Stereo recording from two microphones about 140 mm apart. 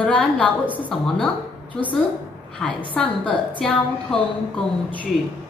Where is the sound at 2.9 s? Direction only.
5° left (ahead or behind).